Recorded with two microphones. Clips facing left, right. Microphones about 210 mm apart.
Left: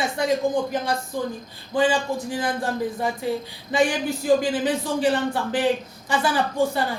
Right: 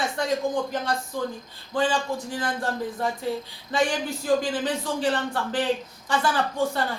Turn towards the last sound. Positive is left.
turn(degrees=10)  # may be behind; listen again after turning